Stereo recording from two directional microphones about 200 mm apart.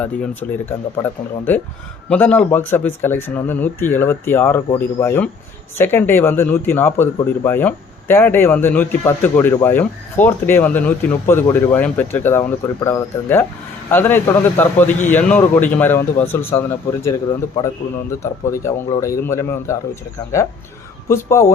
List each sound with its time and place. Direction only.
0.0 s speech: 10° left (ahead or behind)
21.1 s speech: 15° left (ahead or behind)